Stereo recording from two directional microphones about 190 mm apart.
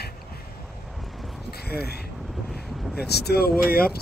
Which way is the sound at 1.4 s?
55° left (ahead or behind).